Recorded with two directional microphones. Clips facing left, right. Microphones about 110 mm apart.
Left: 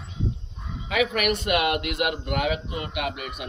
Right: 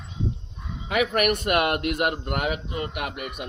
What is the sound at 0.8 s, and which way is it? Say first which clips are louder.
A man's voice: right 1 dB; 50° right (ahead or behind).